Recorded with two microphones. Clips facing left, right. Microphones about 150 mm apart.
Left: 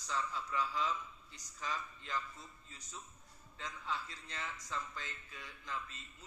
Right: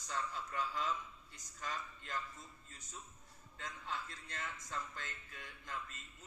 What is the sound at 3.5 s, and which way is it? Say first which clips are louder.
A man's voice: left 2 dB; 50° right (ahead or behind).